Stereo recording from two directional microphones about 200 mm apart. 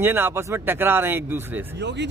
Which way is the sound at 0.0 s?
10° right (ahead or behind).